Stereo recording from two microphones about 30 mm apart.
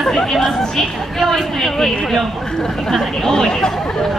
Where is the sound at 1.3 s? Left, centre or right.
Centre.